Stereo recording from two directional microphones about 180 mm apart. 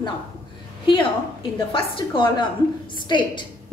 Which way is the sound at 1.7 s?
25° left (ahead or behind).